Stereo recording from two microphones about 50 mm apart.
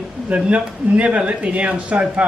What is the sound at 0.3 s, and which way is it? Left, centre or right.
Speech, right.